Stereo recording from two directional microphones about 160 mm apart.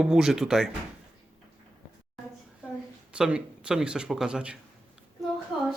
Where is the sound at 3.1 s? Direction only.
5° right (ahead or behind).